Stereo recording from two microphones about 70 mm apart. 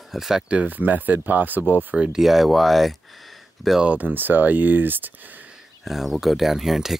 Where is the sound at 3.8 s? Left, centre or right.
Right.